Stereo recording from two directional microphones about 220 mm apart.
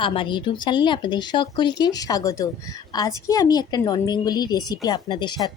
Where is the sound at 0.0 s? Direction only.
25° left (ahead or behind).